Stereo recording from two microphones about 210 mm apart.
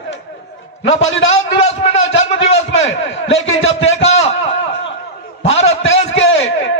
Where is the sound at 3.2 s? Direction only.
65° left (ahead or behind).